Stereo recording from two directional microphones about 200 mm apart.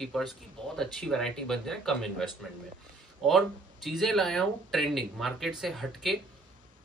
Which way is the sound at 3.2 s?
Centre (ahead or behind).